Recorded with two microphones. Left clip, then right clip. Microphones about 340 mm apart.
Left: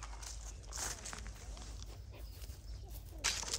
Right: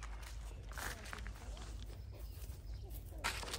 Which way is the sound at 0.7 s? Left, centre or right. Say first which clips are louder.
Left 2 dB; centre.